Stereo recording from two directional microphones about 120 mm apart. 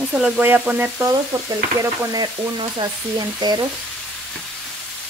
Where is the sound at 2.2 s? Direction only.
40° right (ahead or behind).